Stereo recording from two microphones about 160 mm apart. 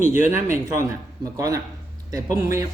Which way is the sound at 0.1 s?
15° right (ahead or behind).